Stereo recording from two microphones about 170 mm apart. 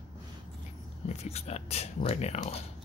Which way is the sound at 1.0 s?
40° left (ahead or behind).